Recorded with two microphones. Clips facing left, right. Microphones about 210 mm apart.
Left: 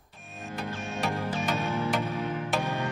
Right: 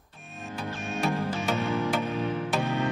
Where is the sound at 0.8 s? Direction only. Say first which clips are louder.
Right 4 dB; 15° left (ahead or behind).